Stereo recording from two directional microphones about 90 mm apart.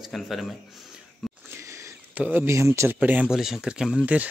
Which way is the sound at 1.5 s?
30° right (ahead or behind).